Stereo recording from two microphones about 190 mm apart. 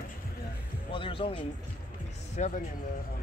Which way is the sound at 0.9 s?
30° left (ahead or behind).